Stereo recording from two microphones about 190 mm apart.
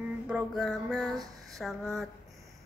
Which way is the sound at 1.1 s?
20° right (ahead or behind).